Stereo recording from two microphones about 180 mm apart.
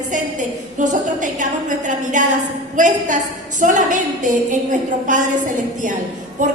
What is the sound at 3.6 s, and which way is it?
A woman's voice, 45° right (ahead or behind).